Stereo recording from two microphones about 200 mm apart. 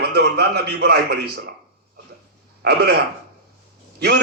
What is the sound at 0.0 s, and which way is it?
A man's voice, 55° right (ahead or behind).